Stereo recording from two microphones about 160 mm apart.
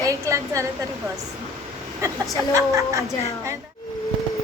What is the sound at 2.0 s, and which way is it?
A woman's voice, 20° right (ahead or behind).